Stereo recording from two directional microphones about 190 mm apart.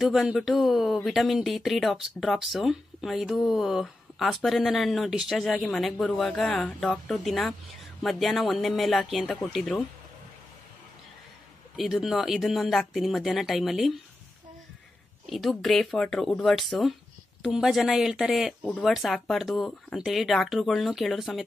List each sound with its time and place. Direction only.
0.0 s speech: 5° right (ahead or behind)
11.7 s speech: centre (ahead or behind)
15.2 s speech: centre (ahead or behind)